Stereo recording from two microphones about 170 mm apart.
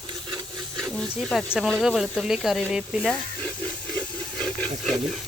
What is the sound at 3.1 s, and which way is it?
Speech, 10° left (ahead or behind).